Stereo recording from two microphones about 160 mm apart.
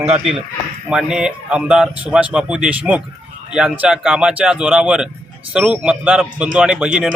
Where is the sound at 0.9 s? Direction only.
5° right (ahead or behind).